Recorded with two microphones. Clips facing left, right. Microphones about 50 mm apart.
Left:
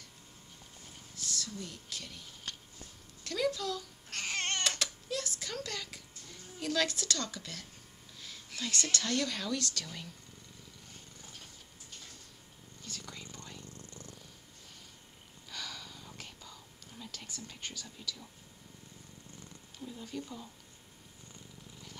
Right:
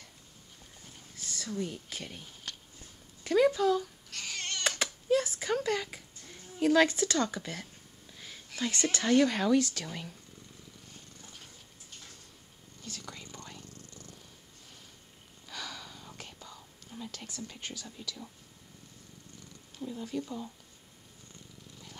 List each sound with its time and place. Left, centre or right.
1.1 s speech: right
3.3 s a sound: centre
4.1 s crying: left
4.6 s a sound: centre
8.5 s speech: centre
12.8 s a sound: centre
13.7 s purr: left
15.4 s whispering: centre
19.8 s speech: centre